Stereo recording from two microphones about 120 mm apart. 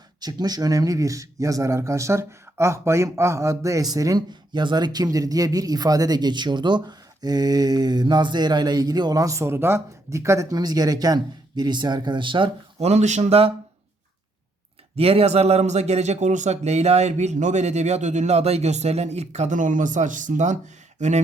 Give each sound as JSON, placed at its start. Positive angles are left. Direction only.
{"t": 0.2, "sound": "speech", "side_deg": -35}
{"t": 12.8, "sound": "speech", "side_deg": -70}
{"t": 14.9, "sound": "speech", "side_deg": -55}